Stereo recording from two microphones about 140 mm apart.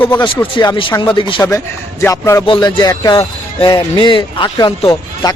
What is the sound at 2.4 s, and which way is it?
Speech, 35° left (ahead or behind).